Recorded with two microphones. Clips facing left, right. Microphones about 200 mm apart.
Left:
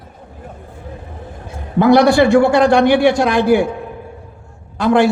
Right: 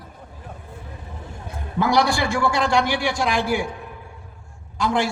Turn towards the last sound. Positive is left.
turn(degrees=60)  # may be behind; listen again after turning